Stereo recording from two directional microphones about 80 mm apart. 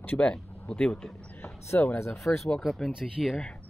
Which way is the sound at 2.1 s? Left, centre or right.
Centre.